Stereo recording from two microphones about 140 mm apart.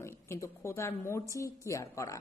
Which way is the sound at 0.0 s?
20° left (ahead or behind).